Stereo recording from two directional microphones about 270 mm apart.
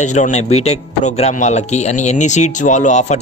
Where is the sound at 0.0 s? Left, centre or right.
Left.